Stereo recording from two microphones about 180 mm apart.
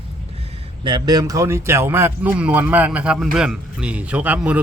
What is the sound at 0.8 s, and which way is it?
Speech, 25° right (ahead or behind).